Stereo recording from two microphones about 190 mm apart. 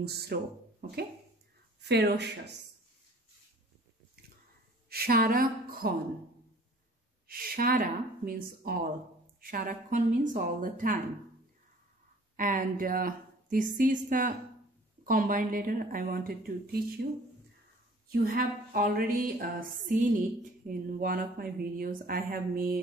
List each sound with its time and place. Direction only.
0.0 s speech: 60° right (ahead or behind)
4.8 s speech: 55° right (ahead or behind)
7.2 s speech: 50° right (ahead or behind)
12.4 s speech: 45° right (ahead or behind)
18.1 s speech: 50° right (ahead or behind)